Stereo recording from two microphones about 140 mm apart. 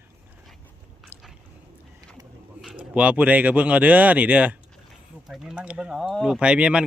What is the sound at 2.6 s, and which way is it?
Speech, 5° right (ahead or behind).